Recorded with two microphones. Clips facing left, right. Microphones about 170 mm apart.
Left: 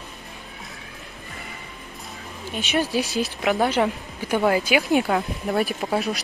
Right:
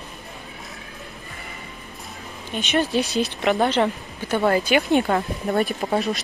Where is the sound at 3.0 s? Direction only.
65° right (ahead or behind).